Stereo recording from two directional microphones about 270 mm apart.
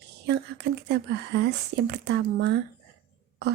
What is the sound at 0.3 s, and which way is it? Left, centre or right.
Speech, right.